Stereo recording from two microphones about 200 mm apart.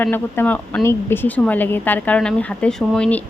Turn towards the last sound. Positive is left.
turn(degrees=5)  # may be behind; listen again after turning